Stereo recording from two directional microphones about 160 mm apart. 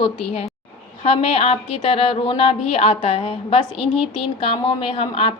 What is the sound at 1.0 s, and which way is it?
A woman's voice, 40° left (ahead or behind).